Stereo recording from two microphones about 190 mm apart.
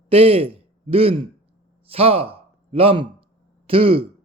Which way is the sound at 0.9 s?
30° right (ahead or behind).